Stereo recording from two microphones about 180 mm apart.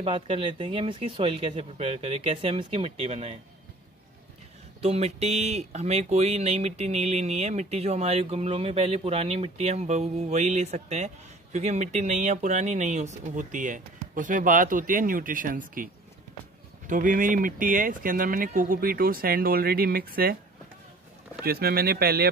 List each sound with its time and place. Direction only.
0.0 s speech: 30° right (ahead or behind)
4.8 s speech: 35° right (ahead or behind); by 20.3 s 55° right (ahead or behind)
21.5 s speech: 60° right (ahead or behind)